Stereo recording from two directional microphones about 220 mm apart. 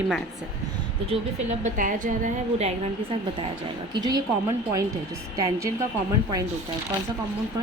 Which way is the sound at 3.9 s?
20° right (ahead or behind).